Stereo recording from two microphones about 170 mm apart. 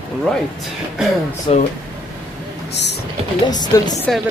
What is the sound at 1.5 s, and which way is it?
Speech, 35° left (ahead or behind).